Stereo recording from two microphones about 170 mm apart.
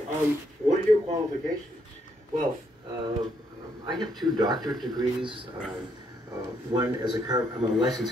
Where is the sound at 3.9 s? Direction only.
25° right (ahead or behind).